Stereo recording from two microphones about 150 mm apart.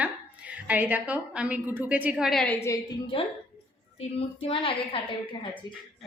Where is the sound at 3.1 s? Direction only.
35° left (ahead or behind).